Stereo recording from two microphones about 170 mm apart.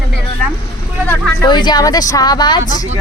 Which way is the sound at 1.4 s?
25° left (ahead or behind).